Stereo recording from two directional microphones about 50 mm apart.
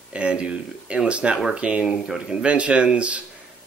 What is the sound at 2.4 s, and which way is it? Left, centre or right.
Speech, right.